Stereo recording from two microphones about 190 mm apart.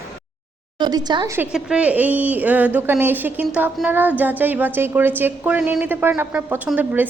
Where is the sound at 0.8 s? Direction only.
20° right (ahead or behind).